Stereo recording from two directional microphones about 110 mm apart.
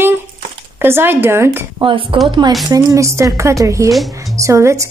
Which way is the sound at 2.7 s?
35° right (ahead or behind).